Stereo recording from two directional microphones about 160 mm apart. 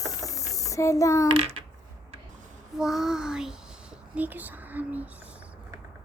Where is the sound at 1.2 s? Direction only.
35° right (ahead or behind).